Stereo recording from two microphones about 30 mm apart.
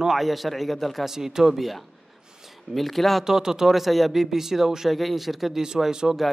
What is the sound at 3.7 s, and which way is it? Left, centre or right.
Speech, centre.